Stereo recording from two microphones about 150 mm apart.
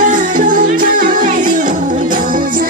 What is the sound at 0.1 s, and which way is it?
Music, 60° right (ahead or behind).